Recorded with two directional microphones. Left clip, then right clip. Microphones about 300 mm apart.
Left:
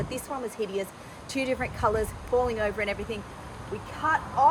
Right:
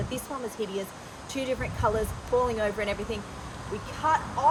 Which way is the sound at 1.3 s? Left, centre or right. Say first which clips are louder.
Left 2 dB; centre.